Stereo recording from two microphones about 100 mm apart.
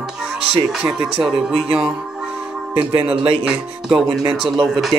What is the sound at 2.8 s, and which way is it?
Speech, 60° right (ahead or behind).